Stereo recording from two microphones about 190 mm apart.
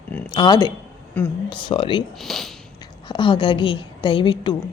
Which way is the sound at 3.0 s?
25° left (ahead or behind).